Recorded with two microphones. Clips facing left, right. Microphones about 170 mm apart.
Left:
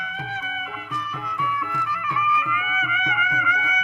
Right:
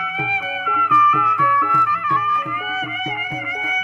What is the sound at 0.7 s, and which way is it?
Music, 70° right (ahead or behind).